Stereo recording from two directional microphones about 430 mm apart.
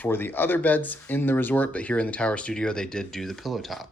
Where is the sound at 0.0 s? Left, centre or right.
Centre.